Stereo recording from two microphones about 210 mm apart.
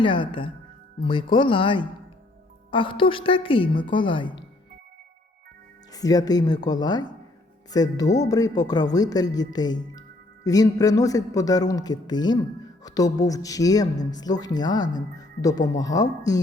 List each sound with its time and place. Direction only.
0.0 s a woman's voice: 25° left (ahead or behind)
5.9 s a woman's voice: 15° left (ahead or behind)